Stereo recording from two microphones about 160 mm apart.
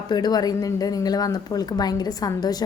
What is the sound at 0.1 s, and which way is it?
A woman's voice, 25° left (ahead or behind).